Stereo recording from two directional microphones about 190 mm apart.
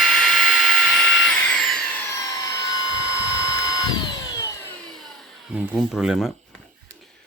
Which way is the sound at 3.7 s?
20° left (ahead or behind).